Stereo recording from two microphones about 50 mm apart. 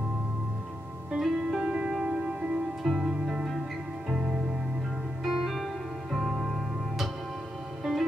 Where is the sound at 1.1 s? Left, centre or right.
Centre.